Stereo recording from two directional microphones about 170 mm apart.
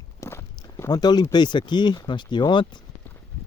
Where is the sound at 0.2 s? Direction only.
15° left (ahead or behind).